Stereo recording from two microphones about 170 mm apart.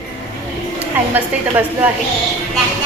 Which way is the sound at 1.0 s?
10° right (ahead or behind).